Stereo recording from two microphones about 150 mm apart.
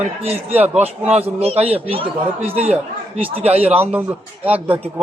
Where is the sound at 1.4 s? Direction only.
40° right (ahead or behind).